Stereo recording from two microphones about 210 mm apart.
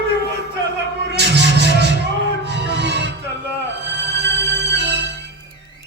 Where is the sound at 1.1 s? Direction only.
55° right (ahead or behind).